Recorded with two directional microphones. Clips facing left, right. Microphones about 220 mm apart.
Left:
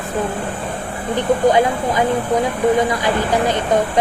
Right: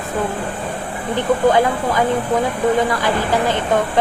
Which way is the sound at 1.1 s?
20° left (ahead or behind).